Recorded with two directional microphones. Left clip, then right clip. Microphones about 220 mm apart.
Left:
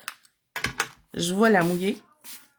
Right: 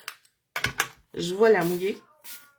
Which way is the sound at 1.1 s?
45° left (ahead or behind).